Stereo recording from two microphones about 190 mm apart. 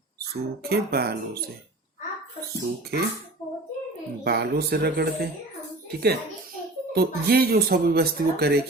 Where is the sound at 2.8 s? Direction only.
55° right (ahead or behind).